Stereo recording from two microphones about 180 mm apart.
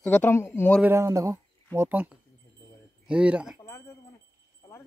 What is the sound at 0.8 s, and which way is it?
Speech, 15° right (ahead or behind).